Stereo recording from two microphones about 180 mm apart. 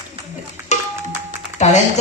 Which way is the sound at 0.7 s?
40° left (ahead or behind).